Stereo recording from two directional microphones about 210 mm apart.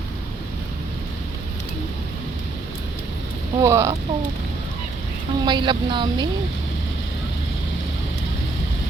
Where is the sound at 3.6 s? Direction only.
15° right (ahead or behind).